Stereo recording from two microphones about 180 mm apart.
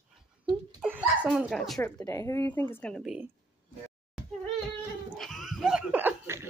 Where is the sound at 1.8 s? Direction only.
15° left (ahead or behind); by 3.3 s 5° right (ahead or behind).